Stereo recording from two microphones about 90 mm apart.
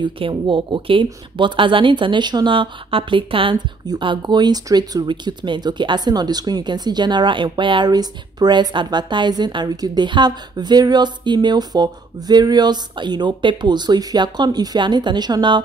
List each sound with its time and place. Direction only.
0.0 s speech: 70° right (ahead or behind)
4.0 s a woman's voice: 60° right (ahead or behind)
5.0 s speech: 60° right (ahead or behind)
7.9 s a woman's voice: 50° right (ahead or behind)